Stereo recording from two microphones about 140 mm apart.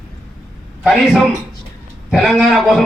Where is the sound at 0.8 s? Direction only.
Centre (ahead or behind).